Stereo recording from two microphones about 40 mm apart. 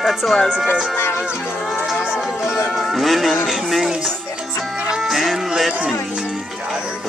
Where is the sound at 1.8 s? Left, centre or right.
Centre.